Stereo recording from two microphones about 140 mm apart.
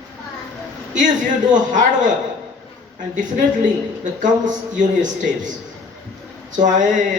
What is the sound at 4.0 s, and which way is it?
A man's voice, 65° right (ahead or behind).